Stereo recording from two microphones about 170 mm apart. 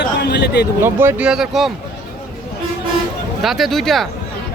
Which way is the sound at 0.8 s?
15° right (ahead or behind).